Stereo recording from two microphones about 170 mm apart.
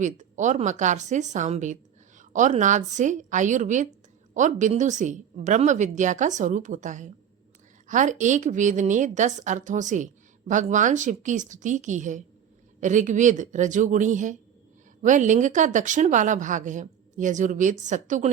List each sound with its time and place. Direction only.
0.0 s speech: 45° right (ahead or behind)